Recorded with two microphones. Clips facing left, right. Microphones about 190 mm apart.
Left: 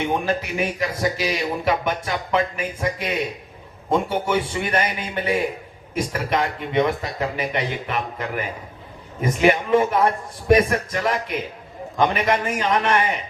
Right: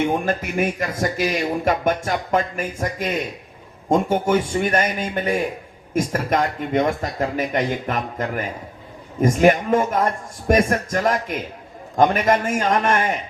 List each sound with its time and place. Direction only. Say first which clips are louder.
0.1 s speech: right 1 dB; 50° right (ahead or behind)